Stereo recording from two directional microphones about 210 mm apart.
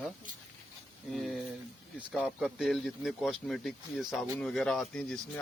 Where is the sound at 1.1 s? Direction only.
Centre (ahead or behind).